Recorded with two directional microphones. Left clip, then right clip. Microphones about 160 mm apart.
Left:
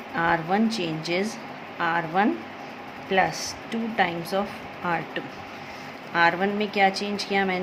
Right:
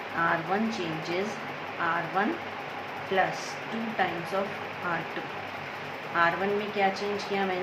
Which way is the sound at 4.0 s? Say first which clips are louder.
Left 5 dB; 75° left (ahead or behind).